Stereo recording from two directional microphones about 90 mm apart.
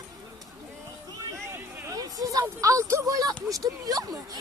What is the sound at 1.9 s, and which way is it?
Speech, 40° right (ahead or behind).